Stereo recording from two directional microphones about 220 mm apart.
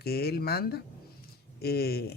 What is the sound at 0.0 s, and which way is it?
Speech, 45° left (ahead or behind).